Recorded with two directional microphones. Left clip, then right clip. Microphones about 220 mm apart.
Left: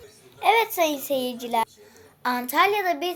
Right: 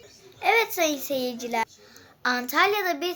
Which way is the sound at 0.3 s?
Centre (ahead or behind).